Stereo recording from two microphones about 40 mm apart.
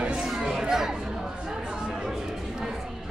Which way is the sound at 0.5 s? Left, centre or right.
Centre.